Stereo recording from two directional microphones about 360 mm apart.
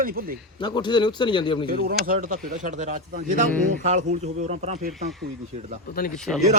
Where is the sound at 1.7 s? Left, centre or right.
Right.